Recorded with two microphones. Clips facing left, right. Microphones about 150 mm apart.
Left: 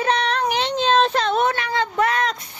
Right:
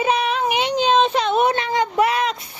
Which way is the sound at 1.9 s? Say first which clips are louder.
Right 1 dB; 10° right (ahead or behind).